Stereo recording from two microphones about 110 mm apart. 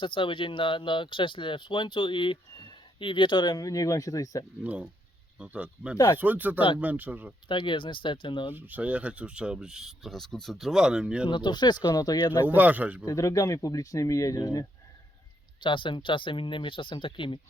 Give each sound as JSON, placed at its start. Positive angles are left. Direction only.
{"t": 0.0, "sound": "speech", "side_deg": 50}
{"t": 4.6, "sound": "speech", "side_deg": -15}
{"t": 7.4, "sound": "speech", "side_deg": 45}
{"t": 8.5, "sound": "speech", "side_deg": -15}
{"t": 11.3, "sound": "speech", "side_deg": 45}
{"t": 12.5, "sound": "speech", "side_deg": -15}
{"t": 13.1, "sound": "speech", "side_deg": 30}
{"t": 15.6, "sound": "speech", "side_deg": 50}